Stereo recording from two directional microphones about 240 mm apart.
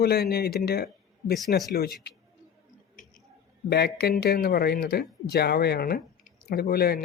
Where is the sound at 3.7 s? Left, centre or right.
Left.